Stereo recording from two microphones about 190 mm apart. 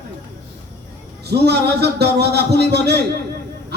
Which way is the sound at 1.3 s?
60° right (ahead or behind).